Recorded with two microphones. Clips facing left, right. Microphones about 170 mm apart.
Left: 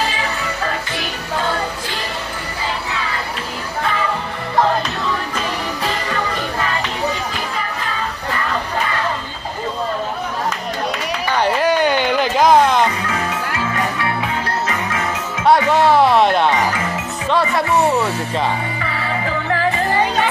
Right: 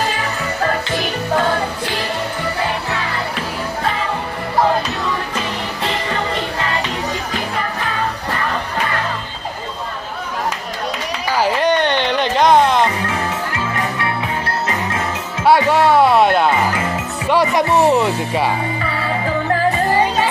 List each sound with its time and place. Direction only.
11.3 s music: centre (ahead or behind)
15.4 s music: 5° right (ahead or behind)
17.3 s speech: 15° right (ahead or behind)